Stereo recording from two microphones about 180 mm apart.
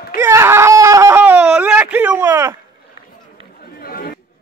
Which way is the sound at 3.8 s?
55° left (ahead or behind).